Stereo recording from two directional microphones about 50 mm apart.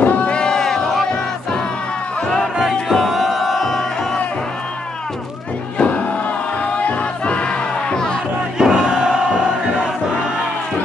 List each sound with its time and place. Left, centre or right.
0.0 s a sound: left
2.7 s crowd: centre
5.8 s crowd: left
6.8 s music: left
7.9 s music: centre
8.5 s music: centre